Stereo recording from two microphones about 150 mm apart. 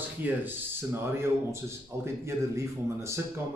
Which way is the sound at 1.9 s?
20° right (ahead or behind).